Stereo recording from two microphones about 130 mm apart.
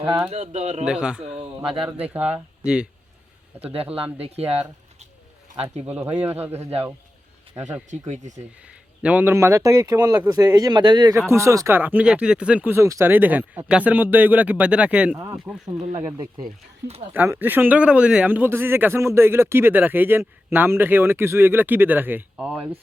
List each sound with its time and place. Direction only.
0.3 s speech: 55° right (ahead or behind)
0.9 s speech: 5° right (ahead or behind)
1.2 s a sound: 55° right (ahead or behind)
2.1 s speech: 10° right (ahead or behind)
3.9 s speech: 45° right (ahead or behind)
5.9 s speech: 15° right (ahead or behind)
6.6 s speech: 50° right (ahead or behind)
7.9 s speech: 70° right (ahead or behind)
9.0 s speech: 10° right (ahead or behind); by 11.1 s 35° right (ahead or behind)
11.3 s speech: 25° right (ahead or behind); by 15.6 s 5° right (ahead or behind)
15.9 s speech: 50° right (ahead or behind)
17.2 s speech: 15° right (ahead or behind)